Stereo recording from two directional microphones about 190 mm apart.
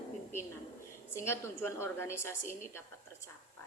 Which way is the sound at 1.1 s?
15° left (ahead or behind).